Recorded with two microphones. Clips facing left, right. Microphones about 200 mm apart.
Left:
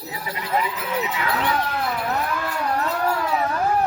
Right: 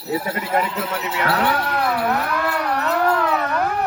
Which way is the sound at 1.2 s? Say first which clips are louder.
Right 7 dB; 70° right (ahead or behind).